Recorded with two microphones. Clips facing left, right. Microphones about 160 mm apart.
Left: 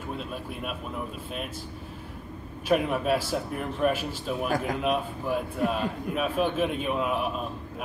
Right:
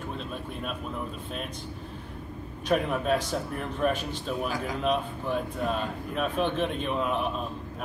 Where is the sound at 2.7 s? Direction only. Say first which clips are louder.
Left 1 dB; 5° left (ahead or behind).